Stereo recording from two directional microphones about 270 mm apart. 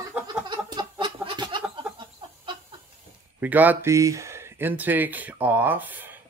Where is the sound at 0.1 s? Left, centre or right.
Centre.